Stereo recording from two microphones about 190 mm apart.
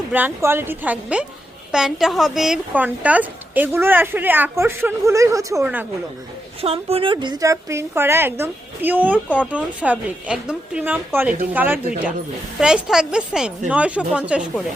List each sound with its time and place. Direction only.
0.1 s a woman's voice: 10° right (ahead or behind)
6.6 s a woman's voice: 30° right (ahead or behind); by 14.6 s 5° right (ahead or behind)